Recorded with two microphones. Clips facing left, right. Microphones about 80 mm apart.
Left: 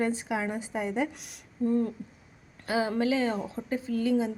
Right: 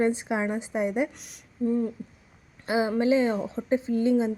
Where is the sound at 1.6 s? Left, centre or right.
Centre.